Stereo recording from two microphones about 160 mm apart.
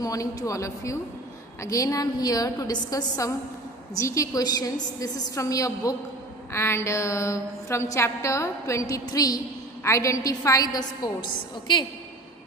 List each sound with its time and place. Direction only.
0.0 s a woman's voice: 20° left (ahead or behind)